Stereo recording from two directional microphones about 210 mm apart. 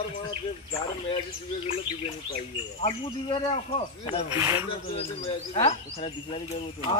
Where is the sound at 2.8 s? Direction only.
25° left (ahead or behind).